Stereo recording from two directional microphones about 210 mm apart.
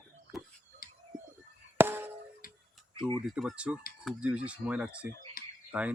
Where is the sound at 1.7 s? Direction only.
10° right (ahead or behind).